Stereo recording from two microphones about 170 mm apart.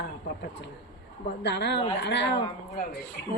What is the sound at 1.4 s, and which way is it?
Speech, 85° left.